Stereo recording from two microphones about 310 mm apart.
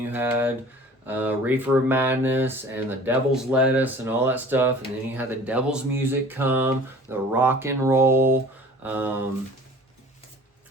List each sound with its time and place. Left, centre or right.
0.0 s speech: centre